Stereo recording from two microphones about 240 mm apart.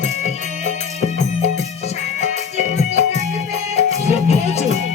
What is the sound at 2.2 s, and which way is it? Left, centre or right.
Music, left.